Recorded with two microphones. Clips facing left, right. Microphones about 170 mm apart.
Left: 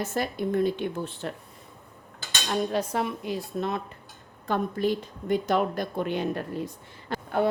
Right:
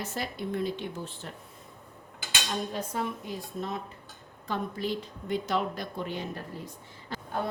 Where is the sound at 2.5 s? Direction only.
75° left (ahead or behind).